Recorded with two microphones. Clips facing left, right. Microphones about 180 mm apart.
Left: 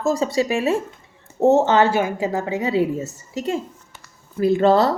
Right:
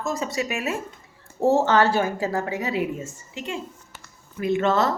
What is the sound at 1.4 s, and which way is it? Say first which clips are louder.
A woman's voice: left 4 dB; 20° left (ahead or behind).